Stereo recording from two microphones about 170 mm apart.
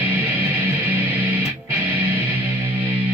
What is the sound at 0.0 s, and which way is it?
Music, 10° right (ahead or behind).